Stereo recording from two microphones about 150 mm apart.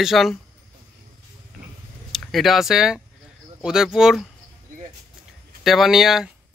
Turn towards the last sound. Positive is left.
turn(degrees=0)  # may be behind; listen again after turning